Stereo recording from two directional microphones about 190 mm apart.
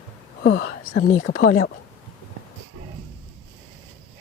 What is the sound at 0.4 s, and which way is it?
Speech, 65° left (ahead or behind).